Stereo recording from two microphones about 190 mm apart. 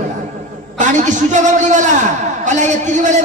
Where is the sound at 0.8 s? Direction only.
40° right (ahead or behind).